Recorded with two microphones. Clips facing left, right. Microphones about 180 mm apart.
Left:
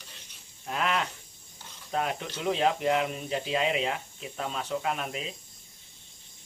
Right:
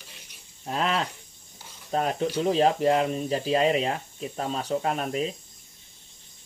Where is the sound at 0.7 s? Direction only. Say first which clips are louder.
Right 3 dB; 35° right (ahead or behind).